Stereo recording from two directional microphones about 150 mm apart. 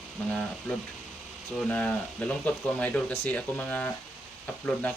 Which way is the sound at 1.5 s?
5° left (ahead or behind).